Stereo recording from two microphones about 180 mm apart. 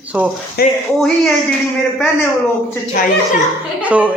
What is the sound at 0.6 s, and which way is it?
Speech, 55° left (ahead or behind).